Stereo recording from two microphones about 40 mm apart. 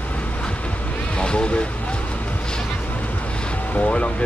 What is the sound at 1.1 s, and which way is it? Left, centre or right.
Speech, left.